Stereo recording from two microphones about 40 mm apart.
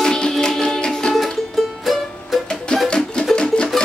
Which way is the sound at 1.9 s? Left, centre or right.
Centre.